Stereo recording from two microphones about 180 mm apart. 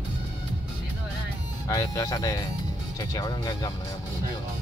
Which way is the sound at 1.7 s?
20° left (ahead or behind).